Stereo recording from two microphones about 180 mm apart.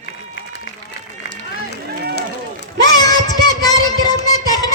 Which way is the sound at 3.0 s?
20° left (ahead or behind).